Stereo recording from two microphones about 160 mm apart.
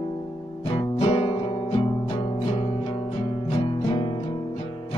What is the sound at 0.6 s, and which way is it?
Music, 35° left (ahead or behind).